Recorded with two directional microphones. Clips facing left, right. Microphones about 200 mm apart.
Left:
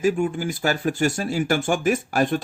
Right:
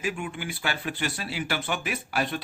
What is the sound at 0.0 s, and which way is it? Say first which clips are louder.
Speech: left 10 dB; 40° left (ahead or behind).